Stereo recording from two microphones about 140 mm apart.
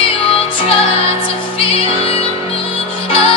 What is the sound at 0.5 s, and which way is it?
Music, 40° left (ahead or behind).